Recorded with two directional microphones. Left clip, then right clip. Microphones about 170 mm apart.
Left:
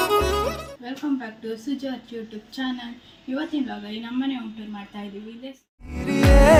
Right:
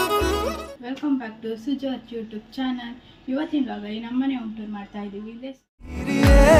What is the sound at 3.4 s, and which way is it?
Speech, 5° right (ahead or behind).